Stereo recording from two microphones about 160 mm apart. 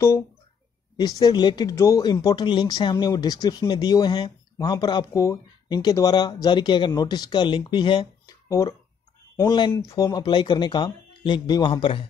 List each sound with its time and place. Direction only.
0.9 s speech: 25° left (ahead or behind)